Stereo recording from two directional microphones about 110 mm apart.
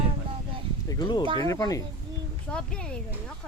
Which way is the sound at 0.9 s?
40° left (ahead or behind).